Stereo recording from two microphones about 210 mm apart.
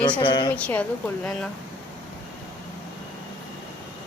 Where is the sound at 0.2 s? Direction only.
20° left (ahead or behind).